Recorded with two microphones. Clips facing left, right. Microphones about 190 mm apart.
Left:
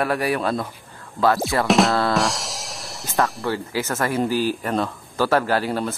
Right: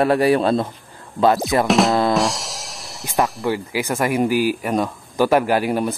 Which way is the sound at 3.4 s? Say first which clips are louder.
Right 3 dB; 15° right (ahead or behind).